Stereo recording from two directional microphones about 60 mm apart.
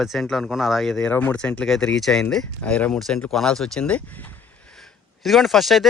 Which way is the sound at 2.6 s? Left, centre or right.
Centre.